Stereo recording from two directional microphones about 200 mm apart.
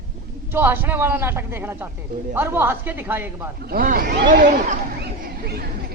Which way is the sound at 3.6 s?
50° right (ahead or behind).